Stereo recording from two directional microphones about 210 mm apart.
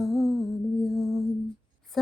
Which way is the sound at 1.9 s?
Centre (ahead or behind).